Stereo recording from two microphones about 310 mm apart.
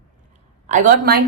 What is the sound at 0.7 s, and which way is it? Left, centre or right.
Speech, right.